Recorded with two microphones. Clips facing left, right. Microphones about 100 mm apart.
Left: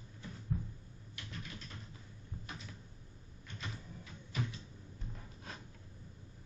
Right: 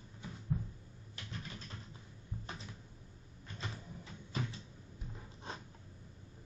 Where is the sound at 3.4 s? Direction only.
30° right (ahead or behind).